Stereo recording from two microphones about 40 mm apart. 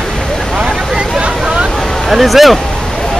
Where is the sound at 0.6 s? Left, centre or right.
Right.